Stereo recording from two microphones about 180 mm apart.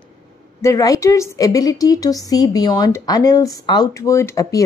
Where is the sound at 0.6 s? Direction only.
20° left (ahead or behind).